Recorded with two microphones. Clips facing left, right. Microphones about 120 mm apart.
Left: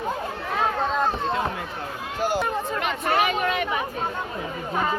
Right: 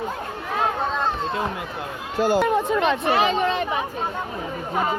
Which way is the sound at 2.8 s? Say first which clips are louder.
Right 3 dB; 25° right (ahead or behind).